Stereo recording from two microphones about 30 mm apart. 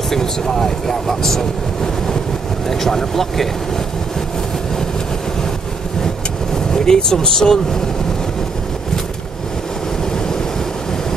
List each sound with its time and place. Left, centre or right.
0.1 s speech: centre
2.7 s speech: centre
6.5 s speech: left